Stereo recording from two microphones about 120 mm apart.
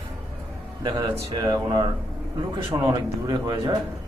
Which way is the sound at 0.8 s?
30° right (ahead or behind).